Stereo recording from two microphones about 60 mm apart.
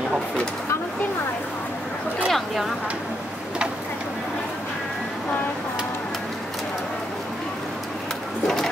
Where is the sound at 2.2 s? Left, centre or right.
Centre.